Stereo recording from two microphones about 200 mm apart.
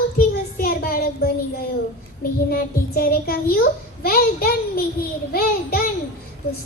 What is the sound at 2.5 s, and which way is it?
A child's voice, 50° left (ahead or behind).